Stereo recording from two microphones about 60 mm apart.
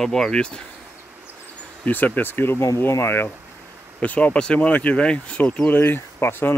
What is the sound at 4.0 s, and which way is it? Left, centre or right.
Speech, left.